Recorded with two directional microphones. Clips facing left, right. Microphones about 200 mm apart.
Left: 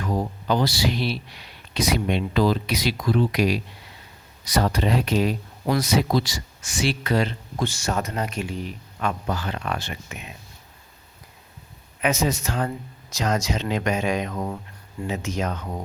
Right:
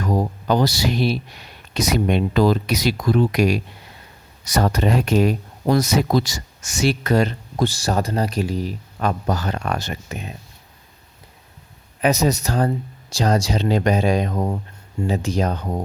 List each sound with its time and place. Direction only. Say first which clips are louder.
0.0 s speech: right 4 dB; 40° right (ahead or behind)
11.9 s speech: right 5 dB; 35° right (ahead or behind)